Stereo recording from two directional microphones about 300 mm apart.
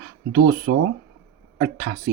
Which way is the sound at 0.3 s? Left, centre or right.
Right.